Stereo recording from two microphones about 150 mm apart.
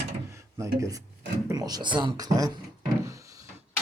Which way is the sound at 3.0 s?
20° right (ahead or behind).